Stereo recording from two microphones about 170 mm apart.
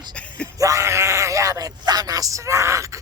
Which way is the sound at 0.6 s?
15° right (ahead or behind).